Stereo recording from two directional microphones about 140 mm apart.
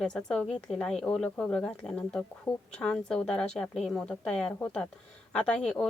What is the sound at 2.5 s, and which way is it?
Speech, 30° left (ahead or behind).